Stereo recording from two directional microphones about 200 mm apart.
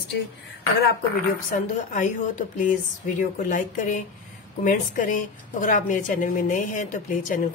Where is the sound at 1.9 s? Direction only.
40° left (ahead or behind).